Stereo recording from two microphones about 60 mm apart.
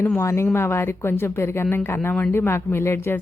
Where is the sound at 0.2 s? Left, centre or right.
Left.